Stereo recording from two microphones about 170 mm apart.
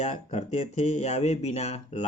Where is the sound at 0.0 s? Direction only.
40° left (ahead or behind).